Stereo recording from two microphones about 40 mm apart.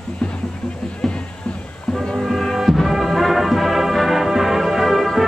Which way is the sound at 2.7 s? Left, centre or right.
Centre.